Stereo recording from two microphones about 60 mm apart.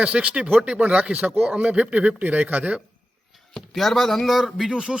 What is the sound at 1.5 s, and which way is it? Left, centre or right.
Speech, centre.